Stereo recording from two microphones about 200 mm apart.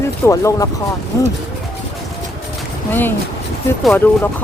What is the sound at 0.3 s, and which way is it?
Speech, 15° left (ahead or behind).